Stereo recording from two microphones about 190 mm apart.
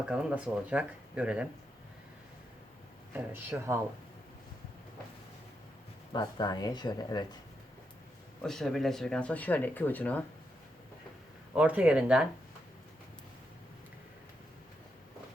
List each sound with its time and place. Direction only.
0.0 s speech: 5° right (ahead or behind)
3.1 s speech: 10° right (ahead or behind)
6.1 s speech: 25° left (ahead or behind)
8.4 s speech: centre (ahead or behind)
11.5 s speech: 5° right (ahead or behind)